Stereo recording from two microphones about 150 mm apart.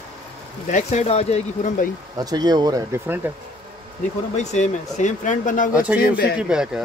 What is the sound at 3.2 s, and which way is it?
Speech, 10° right (ahead or behind).